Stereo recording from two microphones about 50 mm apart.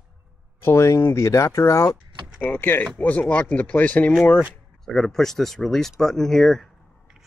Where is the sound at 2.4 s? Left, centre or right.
Left.